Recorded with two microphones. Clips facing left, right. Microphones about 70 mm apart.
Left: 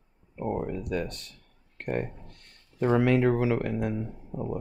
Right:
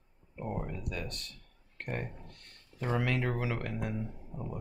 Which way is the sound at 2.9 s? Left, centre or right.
Centre.